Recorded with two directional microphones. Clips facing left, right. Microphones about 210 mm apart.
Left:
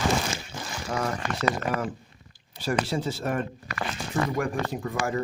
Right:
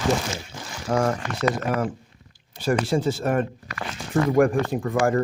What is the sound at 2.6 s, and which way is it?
Speech, 50° right (ahead or behind).